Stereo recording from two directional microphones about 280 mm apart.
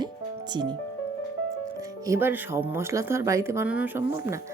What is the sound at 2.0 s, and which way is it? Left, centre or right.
Speech, centre.